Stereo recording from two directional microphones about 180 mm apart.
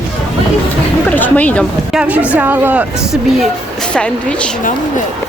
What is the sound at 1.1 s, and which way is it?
Speech, 10° left (ahead or behind).